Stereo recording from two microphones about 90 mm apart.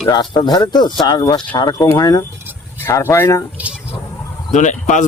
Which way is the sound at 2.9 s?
30° left (ahead or behind).